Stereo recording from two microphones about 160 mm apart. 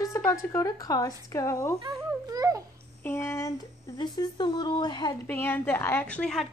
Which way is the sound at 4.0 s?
30° left (ahead or behind).